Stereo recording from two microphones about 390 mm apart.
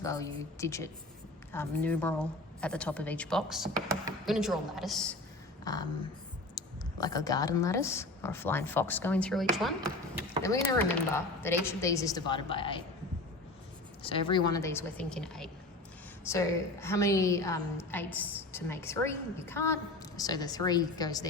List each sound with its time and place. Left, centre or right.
0.0 s a woman's voice: centre
7.0 s speech: centre
10.4 s a woman's voice: centre
14.0 s a woman's voice: centre